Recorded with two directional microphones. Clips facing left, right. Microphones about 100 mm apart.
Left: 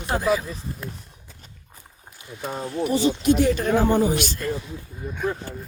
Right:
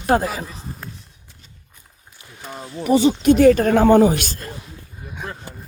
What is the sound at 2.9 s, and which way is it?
Speech, 65° right (ahead or behind).